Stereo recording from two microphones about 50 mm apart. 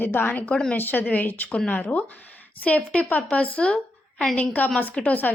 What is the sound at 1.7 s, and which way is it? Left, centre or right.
A woman's voice, left.